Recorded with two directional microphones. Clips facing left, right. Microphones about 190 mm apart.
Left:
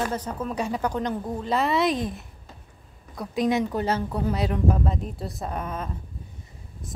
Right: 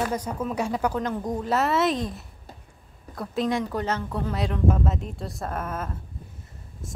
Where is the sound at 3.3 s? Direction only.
15° left (ahead or behind).